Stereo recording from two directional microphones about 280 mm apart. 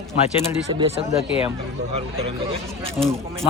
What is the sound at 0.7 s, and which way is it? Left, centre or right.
Speech, centre.